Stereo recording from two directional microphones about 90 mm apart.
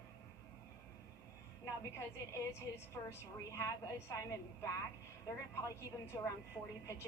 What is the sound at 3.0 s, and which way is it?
Speech, 30° left (ahead or behind).